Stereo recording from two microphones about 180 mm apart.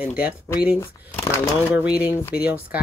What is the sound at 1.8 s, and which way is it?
Speech, 5° right (ahead or behind).